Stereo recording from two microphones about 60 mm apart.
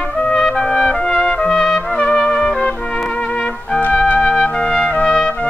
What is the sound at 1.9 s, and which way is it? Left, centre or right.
Trumpet, centre.